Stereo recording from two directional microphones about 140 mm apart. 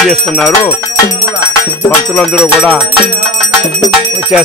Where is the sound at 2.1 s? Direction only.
10° left (ahead or behind).